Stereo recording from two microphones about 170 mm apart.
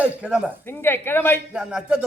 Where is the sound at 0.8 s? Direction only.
10° left (ahead or behind).